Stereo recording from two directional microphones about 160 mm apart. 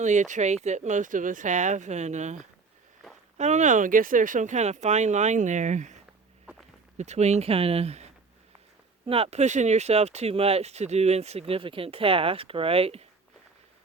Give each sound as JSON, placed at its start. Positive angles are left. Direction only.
{"t": 0.0, "sound": "speech", "side_deg": -50}
{"t": 6.4, "sound": "walk", "side_deg": -5}
{"t": 6.9, "sound": "speech", "side_deg": -45}